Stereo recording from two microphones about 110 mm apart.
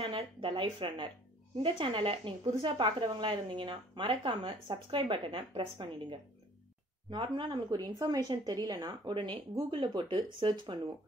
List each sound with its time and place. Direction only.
0.0 s a woman's voice: 55° right (ahead or behind)